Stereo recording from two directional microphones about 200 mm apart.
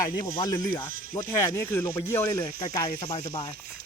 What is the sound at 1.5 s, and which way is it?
Speech, 10° left (ahead or behind).